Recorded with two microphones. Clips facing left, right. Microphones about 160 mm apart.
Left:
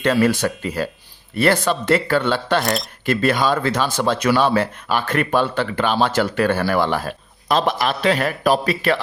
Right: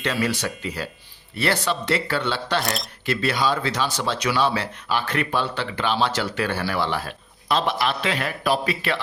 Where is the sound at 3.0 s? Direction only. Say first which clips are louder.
Left 5 dB; 50° left (ahead or behind).